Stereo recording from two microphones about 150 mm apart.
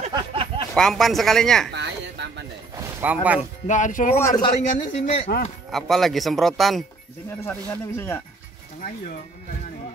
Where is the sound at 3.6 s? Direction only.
55° left (ahead or behind).